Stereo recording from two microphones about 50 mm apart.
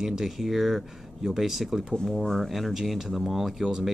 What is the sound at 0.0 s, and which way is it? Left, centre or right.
Speech, centre.